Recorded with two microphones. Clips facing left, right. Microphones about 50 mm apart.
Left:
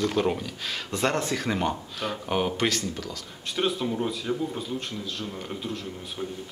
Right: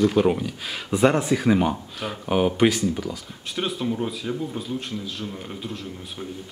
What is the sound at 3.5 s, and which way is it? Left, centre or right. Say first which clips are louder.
Speech: even; centre.